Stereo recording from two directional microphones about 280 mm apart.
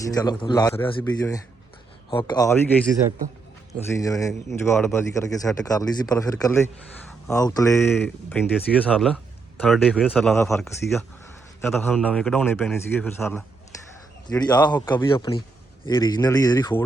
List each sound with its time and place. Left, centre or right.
0.1 s speech: centre
3.8 s speech: centre